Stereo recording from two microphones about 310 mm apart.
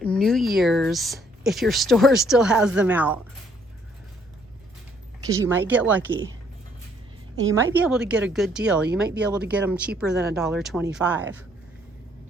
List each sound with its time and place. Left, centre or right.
0.0 s a woman's voice: centre
5.2 s a woman's voice: centre
7.5 s a woman's voice: centre